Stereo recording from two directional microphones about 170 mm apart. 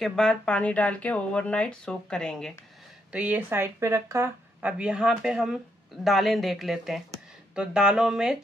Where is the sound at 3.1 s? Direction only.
10° right (ahead or behind).